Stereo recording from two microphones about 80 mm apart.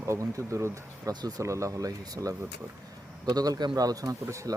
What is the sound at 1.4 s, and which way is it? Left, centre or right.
A man's voice, right.